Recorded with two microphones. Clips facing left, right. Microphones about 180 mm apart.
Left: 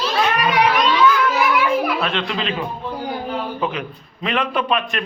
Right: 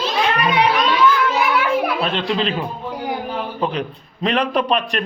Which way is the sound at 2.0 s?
35° right (ahead or behind).